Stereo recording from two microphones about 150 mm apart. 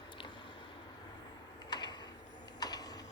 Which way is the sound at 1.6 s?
30° left (ahead or behind).